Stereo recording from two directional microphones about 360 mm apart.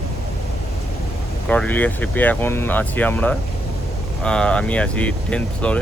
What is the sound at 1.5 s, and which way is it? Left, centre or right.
Speech, centre.